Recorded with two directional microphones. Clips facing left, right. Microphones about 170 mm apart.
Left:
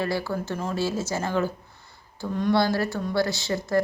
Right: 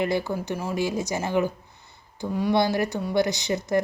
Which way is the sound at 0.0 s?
20° right (ahead or behind).